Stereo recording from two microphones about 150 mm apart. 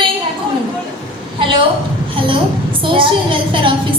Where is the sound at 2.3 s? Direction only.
35° right (ahead or behind).